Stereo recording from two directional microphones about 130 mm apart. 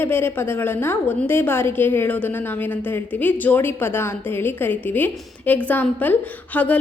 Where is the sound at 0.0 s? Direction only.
15° left (ahead or behind).